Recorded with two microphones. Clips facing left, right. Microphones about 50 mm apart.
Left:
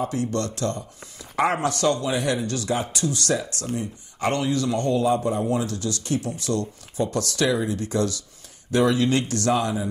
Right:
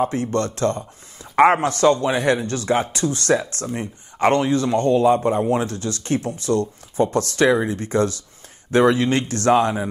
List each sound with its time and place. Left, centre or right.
0.0 s speech: right